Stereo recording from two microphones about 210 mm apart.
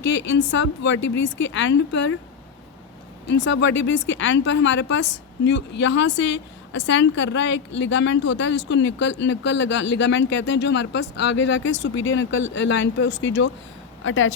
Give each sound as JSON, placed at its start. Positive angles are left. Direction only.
{"t": 0.0, "sound": "a woman's voice", "side_deg": 60}
{"t": 3.2, "sound": "a woman's voice", "side_deg": 60}
{"t": 14.0, "sound": "a woman's voice", "side_deg": 70}